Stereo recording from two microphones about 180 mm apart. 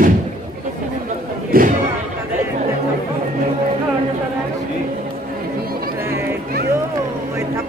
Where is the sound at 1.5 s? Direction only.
50° right (ahead or behind).